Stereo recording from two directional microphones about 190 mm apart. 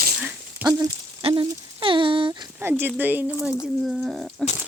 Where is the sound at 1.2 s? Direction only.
25° right (ahead or behind).